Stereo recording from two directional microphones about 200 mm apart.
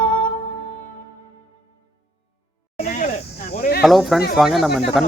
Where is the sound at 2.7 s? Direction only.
40° left (ahead or behind).